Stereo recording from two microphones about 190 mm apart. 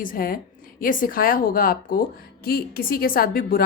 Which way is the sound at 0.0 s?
45° left (ahead or behind).